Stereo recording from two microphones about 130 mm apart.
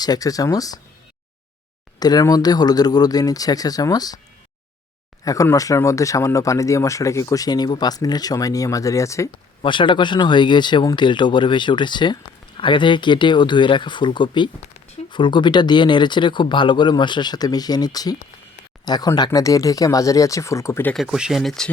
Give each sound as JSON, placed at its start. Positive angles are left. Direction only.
{"t": 0.0, "sound": "speech", "side_deg": 30}
{"t": 2.0, "sound": "speech", "side_deg": 30}
{"t": 5.2, "sound": "speech", "side_deg": 25}
{"t": 9.6, "sound": "speech", "side_deg": 40}
{"t": 20.9, "sound": "speech", "side_deg": -5}